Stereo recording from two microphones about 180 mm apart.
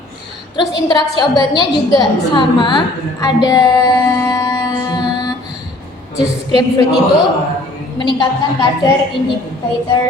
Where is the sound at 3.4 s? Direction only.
20° left (ahead or behind).